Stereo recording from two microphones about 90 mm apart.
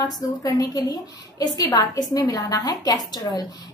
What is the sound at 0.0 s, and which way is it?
A woman's voice, 45° left (ahead or behind).